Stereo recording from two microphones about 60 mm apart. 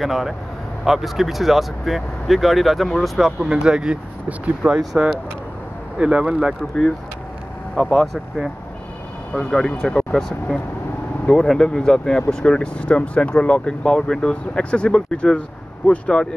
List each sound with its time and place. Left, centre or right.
0.0 s speech: centre
7.7 s speech: centre
9.3 s speech: centre